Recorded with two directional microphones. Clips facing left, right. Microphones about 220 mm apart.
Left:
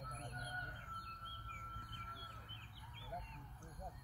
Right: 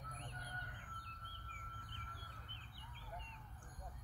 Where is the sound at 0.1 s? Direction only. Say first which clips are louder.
Left 2 dB; 40° left (ahead or behind).